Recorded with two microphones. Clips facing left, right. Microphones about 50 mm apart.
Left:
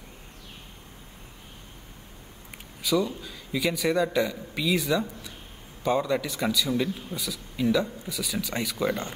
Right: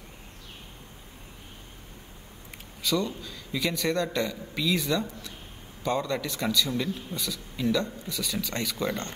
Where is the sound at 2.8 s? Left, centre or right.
Centre.